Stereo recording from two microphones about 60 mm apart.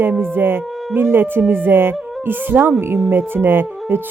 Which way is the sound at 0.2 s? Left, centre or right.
Right.